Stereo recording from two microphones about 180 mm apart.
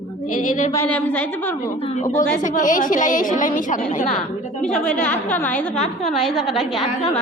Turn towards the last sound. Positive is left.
turn(degrees=0)  # may be behind; listen again after turning